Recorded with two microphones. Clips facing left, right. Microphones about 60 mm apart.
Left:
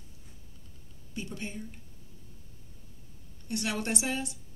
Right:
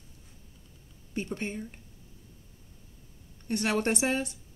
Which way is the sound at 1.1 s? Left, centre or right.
Right.